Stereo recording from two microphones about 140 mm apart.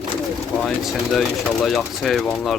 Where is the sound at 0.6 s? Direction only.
Centre (ahead or behind).